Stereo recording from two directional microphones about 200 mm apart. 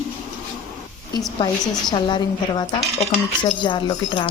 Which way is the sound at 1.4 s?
20° left (ahead or behind).